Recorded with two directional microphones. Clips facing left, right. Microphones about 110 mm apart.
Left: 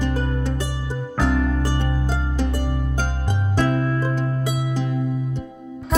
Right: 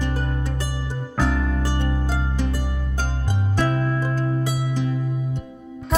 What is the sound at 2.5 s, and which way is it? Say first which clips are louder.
Music: left 4 dB; 65° left (ahead or behind).